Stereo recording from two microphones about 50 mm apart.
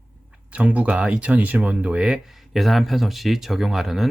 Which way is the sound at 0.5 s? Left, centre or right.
Right.